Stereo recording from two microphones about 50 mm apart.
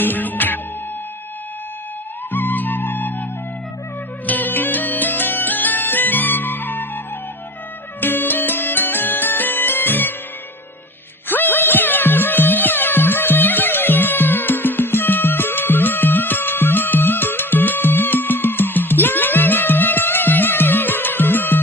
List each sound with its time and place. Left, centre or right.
0.0 s music: left
2.3 s music: left
4.3 s music: left
8.0 s music: left
11.3 s music: left